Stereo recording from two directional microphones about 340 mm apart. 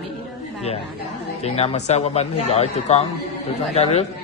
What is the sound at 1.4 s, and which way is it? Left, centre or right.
A man's voice, centre.